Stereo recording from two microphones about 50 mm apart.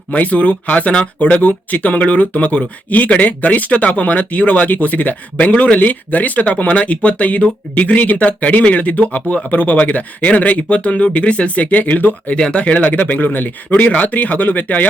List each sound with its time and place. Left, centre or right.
0.1 s speech: left
12.4 s speech: left